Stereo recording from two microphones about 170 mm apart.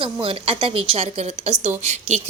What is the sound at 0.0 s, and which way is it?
A woman's voice, 35° right (ahead or behind).